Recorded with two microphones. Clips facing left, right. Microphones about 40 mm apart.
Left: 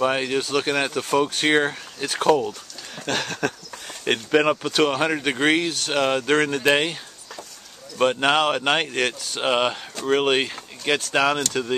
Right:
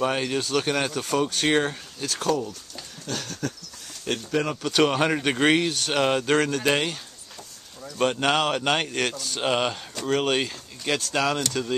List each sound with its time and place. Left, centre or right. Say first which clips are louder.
0.0 s speech: left 3 dB; centre
2.0 s speech: left 7 dB; left
3.1 s speech: left 6 dB; left
4.6 s speech: left 1 dB; centre
8.0 s speech: left 3 dB; centre